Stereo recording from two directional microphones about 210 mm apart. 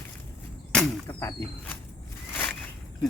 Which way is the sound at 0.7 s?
5° left (ahead or behind).